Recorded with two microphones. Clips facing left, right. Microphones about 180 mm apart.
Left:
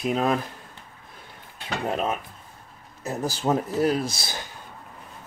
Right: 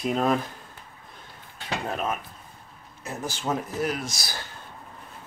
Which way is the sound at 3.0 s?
40° left (ahead or behind).